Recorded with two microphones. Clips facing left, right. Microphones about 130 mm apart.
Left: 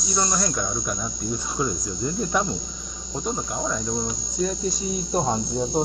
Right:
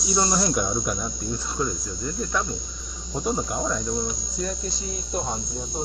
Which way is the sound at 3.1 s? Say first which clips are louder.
Right 2 dB; 5° right (ahead or behind).